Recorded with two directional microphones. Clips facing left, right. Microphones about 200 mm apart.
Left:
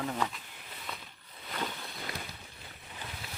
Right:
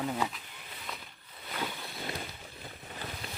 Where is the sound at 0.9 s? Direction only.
Centre (ahead or behind).